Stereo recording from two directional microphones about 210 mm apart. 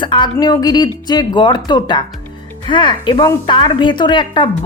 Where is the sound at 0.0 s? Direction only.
20° left (ahead or behind).